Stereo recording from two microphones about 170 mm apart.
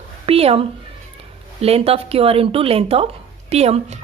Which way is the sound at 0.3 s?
35° right (ahead or behind).